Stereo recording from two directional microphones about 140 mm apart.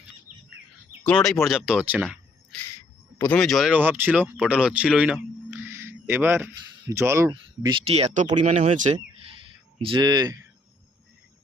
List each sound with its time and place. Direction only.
1.0 s speech: 5° left (ahead or behind)
3.2 s speech: 10° left (ahead or behind)
3.7 s speech: 15° right (ahead or behind); by 7.8 s 30° right (ahead or behind)
7.9 s speech: 50° right (ahead or behind)
8.4 s speech: 45° right (ahead or behind)
8.7 s speech: 65° right (ahead or behind)
9.8 s speech: 35° right (ahead or behind)